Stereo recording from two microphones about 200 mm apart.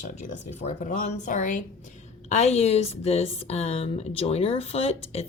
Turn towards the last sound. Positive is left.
turn(degrees=30)  # may be behind; listen again after turning